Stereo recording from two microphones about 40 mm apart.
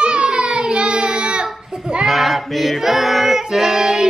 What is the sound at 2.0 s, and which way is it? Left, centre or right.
Child singing, centre.